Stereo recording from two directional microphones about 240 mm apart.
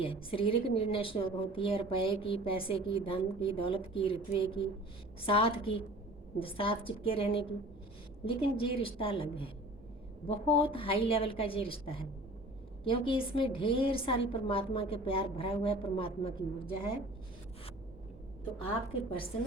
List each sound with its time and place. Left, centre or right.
0.0 s a woman's voice: left
18.7 s a woman's voice: left